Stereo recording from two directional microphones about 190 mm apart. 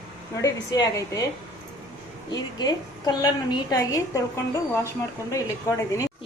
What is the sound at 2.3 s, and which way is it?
A woman's voice, 20° left (ahead or behind).